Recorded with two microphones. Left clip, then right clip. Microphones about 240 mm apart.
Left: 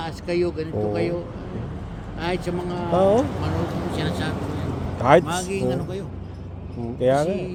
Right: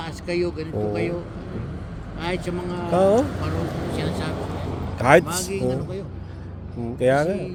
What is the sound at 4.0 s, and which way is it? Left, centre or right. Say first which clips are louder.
Speech: left 1 dB; centre.